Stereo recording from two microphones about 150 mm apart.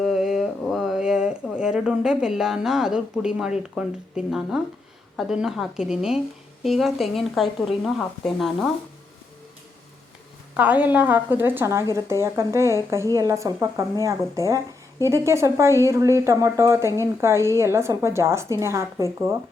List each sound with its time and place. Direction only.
0.0 s a woman's voice: centre (ahead or behind)
10.6 s a woman's voice: 10° right (ahead or behind)